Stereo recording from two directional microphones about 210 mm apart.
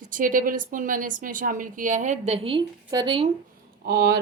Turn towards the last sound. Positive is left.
turn(degrees=-50)  # may be behind; listen again after turning